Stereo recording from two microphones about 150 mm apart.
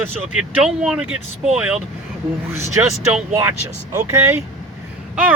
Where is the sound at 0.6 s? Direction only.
5° right (ahead or behind).